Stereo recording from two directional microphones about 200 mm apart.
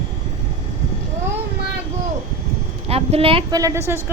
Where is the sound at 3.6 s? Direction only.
15° right (ahead or behind).